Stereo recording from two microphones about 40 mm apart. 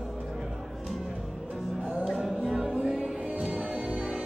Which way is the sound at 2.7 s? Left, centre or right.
Centre.